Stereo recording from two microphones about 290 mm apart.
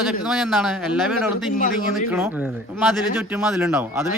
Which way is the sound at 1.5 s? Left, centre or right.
Left.